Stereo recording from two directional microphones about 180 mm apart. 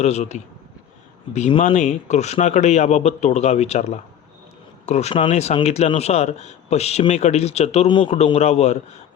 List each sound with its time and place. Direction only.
0.0 s speech: 40° left (ahead or behind)